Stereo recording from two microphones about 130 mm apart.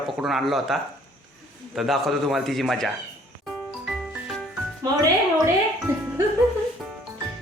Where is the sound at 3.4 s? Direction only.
Centre (ahead or behind).